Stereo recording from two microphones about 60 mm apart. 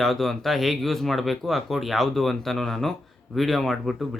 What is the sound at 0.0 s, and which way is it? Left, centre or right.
Speech, centre.